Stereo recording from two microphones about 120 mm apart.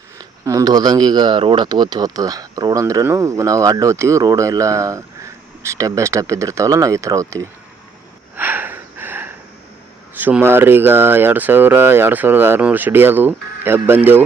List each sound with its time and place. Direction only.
0.2 s speech: 30° right (ahead or behind)
8.4 s gasp: 15° right (ahead or behind)
10.2 s speech: 15° right (ahead or behind)